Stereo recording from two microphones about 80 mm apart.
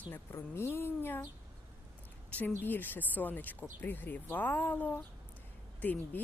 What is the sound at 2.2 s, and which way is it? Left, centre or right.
A woman's voice, centre.